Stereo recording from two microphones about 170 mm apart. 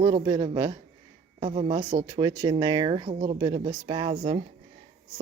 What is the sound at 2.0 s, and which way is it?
Speech, 25° right (ahead or behind).